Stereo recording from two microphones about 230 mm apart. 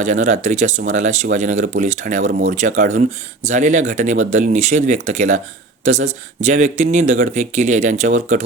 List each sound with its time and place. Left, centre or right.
0.0 s speech: right